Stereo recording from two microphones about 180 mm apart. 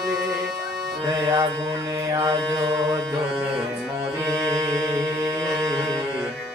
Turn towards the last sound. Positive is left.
turn(degrees=-15)  # may be behind; listen again after turning